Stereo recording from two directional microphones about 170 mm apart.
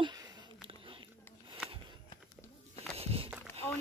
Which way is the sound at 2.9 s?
35° right (ahead or behind).